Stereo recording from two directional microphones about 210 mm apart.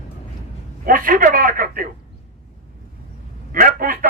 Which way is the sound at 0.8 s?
40° right (ahead or behind).